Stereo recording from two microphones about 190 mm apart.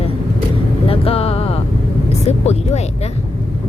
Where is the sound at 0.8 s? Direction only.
30° left (ahead or behind).